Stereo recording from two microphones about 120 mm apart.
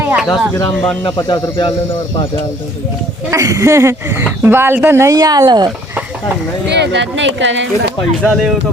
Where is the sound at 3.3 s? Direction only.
30° right (ahead or behind).